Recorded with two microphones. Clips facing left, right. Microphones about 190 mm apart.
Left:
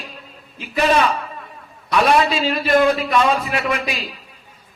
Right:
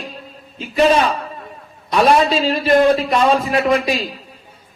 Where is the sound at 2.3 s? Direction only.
35° right (ahead or behind).